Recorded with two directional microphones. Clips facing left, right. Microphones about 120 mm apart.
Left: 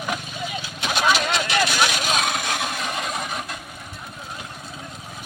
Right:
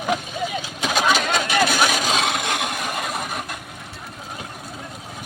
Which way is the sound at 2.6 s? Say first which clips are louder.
Right 1 dB; 10° right (ahead or behind).